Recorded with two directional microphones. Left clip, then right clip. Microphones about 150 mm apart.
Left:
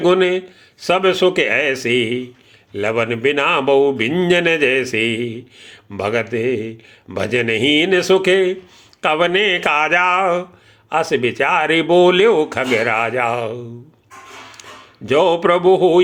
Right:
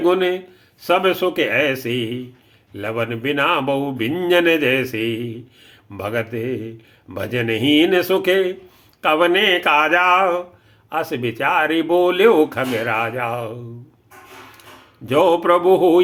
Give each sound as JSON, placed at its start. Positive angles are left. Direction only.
{"t": 0.0, "sound": "speech", "side_deg": 25}
{"t": 15.0, "sound": "speech", "side_deg": 30}